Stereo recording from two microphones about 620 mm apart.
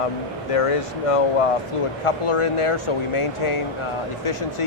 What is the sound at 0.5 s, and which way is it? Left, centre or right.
Speech, left.